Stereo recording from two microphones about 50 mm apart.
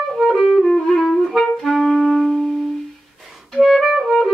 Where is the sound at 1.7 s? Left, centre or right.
Centre.